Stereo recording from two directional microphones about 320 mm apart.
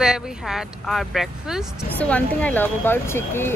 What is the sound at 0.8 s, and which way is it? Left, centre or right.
Speech, centre.